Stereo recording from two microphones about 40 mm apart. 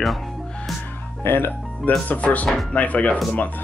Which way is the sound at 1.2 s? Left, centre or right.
Left.